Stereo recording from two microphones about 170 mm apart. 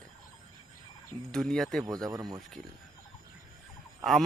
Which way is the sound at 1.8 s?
20° right (ahead or behind).